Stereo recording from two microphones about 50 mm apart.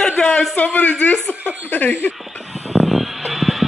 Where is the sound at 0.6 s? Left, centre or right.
Left.